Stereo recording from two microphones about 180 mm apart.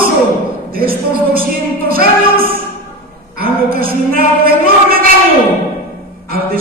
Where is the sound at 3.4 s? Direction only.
55° right (ahead or behind).